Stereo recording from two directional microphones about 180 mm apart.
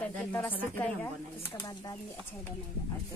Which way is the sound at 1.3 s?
20° left (ahead or behind).